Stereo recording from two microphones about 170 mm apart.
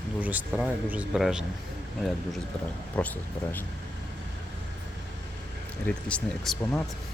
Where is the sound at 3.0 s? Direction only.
5° left (ahead or behind).